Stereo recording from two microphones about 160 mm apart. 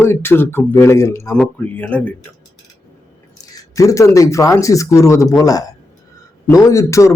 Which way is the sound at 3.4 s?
20° left (ahead or behind).